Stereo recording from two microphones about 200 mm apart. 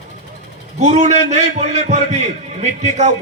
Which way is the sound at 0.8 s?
35° right (ahead or behind).